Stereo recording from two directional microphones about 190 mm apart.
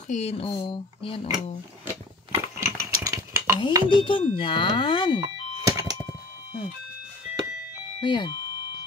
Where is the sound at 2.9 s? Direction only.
15° right (ahead or behind).